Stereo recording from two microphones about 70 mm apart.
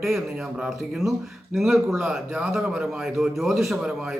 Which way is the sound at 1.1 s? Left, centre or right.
Centre.